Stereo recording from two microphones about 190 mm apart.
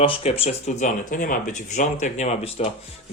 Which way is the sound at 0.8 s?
45° left (ahead or behind).